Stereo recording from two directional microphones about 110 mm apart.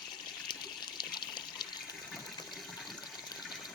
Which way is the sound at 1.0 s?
40° left (ahead or behind).